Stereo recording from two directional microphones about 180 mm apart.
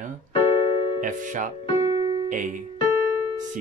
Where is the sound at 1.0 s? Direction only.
45° right (ahead or behind).